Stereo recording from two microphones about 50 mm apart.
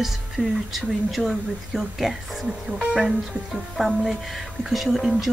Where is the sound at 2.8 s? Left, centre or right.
Centre.